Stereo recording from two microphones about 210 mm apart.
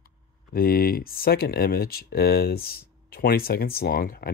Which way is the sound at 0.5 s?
45° left (ahead or behind).